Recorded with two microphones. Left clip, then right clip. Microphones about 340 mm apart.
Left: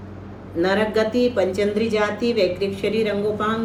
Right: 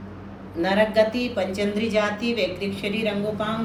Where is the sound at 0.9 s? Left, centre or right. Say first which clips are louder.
Left 1 dB; centre.